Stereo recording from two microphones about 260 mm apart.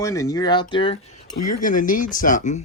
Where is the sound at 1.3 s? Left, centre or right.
Left.